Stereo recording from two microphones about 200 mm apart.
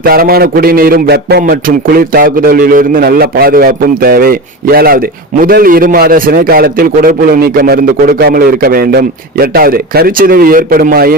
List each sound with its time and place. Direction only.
0.0 s a man's voice: 50° right (ahead or behind)